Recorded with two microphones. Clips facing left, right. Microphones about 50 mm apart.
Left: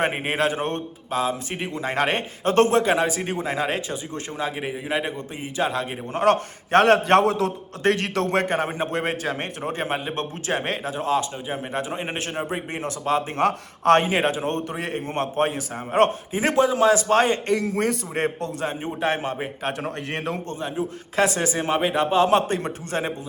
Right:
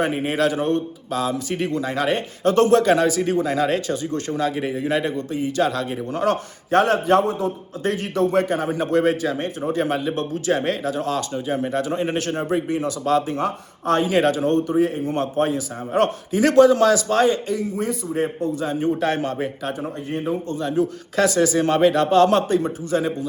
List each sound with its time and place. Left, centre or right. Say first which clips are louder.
0.0 s a man's voice: right 2 dB; left
1.8 s a man's voice: right 1 dB; left
6.2 s a man's voice: left 4 dB; left
7.3 s a man's voice: left 1 dB; left
7.9 s a man's voice: even; left; by 12.6 s centre
12.6 s a man's voice: right 4 dB; left
13.3 s a man's voice: left 2 dB; left
14.1 s a man's voice: right 5 dB; left
16.9 s a man's voice: right 1 dB; left
17.5 s a man's voice: left 2 dB; left
18.8 s a man's voice: right 4 dB; left
20.1 s a man's voice: right 6 dB; left
20.6 s a man's voice: right 6 dB; left
22.4 s a man's voice: right 3 dB; left